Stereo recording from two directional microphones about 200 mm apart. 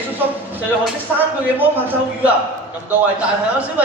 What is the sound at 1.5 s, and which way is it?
Speech, 10° right (ahead or behind).